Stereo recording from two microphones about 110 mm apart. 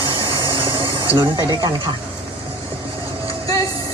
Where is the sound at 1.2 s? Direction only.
40° right (ahead or behind).